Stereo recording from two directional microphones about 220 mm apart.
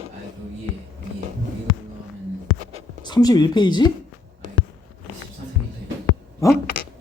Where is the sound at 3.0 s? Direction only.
20° left (ahead or behind).